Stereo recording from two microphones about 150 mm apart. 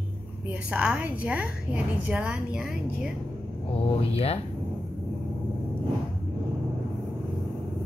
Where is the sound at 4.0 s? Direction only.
40° left (ahead or behind).